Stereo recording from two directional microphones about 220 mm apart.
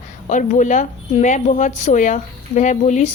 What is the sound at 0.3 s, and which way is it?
A woman's voice, 35° left (ahead or behind).